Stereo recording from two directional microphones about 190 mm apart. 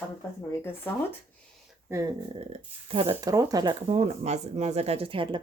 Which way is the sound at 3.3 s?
20° right (ahead or behind).